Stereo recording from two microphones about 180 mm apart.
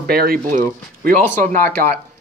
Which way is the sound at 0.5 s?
50° right (ahead or behind).